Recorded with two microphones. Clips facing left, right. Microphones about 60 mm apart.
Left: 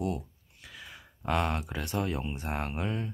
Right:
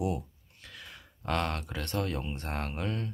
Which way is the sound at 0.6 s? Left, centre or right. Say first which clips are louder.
Left 1 dB; centre.